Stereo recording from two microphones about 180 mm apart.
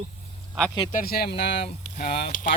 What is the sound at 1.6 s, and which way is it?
Speech, 35° left (ahead or behind).